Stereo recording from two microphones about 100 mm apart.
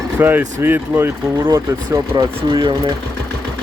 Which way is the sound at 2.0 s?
45° right (ahead or behind).